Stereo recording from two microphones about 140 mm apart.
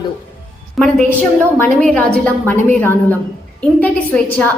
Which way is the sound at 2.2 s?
10° left (ahead or behind).